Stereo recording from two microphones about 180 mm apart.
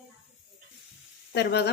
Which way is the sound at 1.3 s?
65° left (ahead or behind).